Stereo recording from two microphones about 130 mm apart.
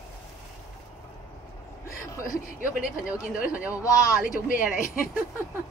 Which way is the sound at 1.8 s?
25° left (ahead or behind).